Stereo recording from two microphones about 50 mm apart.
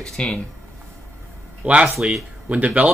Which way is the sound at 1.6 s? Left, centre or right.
Right.